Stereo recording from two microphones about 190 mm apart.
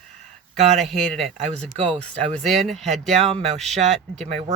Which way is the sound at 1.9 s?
5° left (ahead or behind).